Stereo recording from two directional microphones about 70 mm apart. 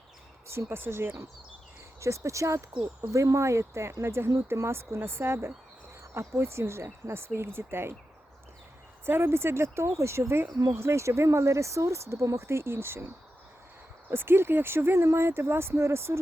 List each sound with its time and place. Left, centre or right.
0.4 s speech: right
9.0 s speech: right
14.1 s speech: right